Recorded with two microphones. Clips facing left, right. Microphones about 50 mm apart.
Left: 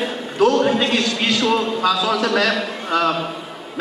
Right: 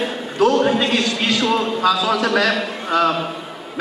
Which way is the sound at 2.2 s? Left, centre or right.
Centre.